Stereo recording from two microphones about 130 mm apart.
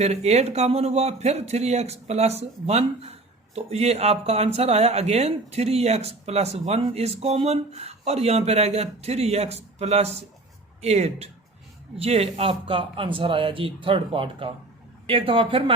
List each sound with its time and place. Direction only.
0.0 s a man's voice: 55° right (ahead or behind)